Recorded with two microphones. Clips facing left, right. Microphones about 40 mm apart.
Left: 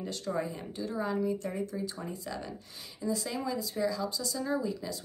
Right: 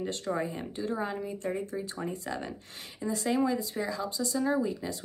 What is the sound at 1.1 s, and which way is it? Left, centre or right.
Speech, right.